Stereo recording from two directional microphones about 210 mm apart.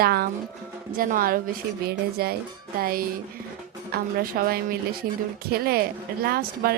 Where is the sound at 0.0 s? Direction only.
50° right (ahead or behind).